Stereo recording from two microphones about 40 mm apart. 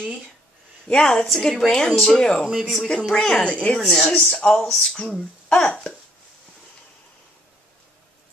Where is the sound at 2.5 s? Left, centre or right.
Centre.